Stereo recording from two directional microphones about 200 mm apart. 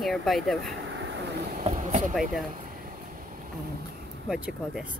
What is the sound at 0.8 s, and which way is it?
Vehicle, 65° right (ahead or behind).